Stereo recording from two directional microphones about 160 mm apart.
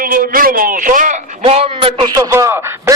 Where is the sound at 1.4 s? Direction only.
35° right (ahead or behind); by 2.9 s 15° right (ahead or behind).